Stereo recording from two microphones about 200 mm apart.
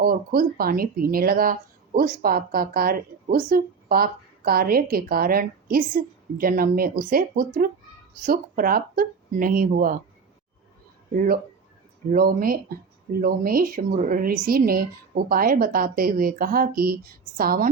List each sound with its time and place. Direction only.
0.0 s speech: 45° right (ahead or behind)
12.0 s speech: 45° right (ahead or behind)